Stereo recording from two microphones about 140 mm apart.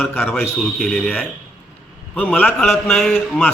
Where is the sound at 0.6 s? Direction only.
Centre (ahead or behind).